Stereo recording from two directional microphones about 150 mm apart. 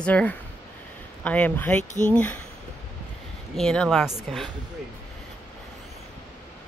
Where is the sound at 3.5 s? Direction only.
5° left (ahead or behind).